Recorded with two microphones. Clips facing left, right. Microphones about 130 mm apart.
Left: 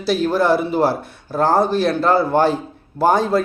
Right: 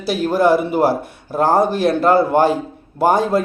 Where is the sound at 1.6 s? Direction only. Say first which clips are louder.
Even; 50° right (ahead or behind).